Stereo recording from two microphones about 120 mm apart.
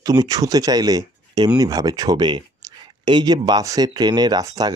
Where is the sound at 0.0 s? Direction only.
30° right (ahead or behind).